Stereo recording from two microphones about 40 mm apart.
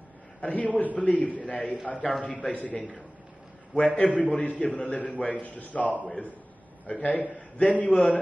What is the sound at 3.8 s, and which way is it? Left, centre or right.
A man's voice, left.